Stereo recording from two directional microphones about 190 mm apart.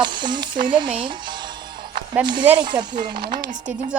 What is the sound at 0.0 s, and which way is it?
Speech, 25° right (ahead or behind).